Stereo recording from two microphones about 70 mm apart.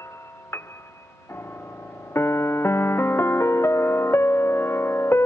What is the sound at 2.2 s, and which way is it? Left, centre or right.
Music, left.